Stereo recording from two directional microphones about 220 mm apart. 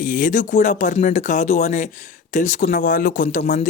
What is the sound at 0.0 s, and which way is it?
Speech, 35° left (ahead or behind).